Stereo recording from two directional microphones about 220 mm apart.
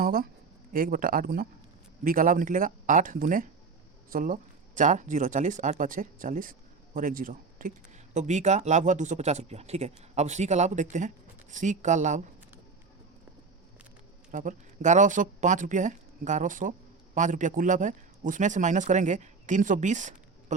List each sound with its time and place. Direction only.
0.0 s speech: 40° right (ahead or behind)
14.3 s speech: 35° right (ahead or behind)